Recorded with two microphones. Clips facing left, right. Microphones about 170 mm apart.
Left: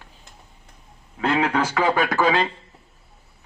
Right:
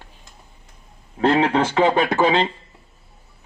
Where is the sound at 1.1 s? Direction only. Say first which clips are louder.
Right 4 dB; 35° right (ahead or behind).